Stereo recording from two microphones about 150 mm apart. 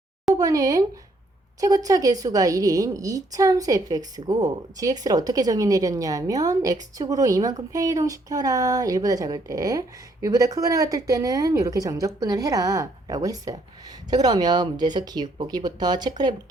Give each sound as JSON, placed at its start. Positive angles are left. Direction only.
{"t": 0.3, "sound": "a woman's voice", "side_deg": -25}